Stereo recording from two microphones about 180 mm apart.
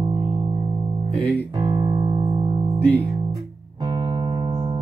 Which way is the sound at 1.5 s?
25° right (ahead or behind).